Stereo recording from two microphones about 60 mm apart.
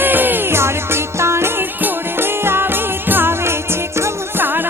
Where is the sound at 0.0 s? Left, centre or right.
Right.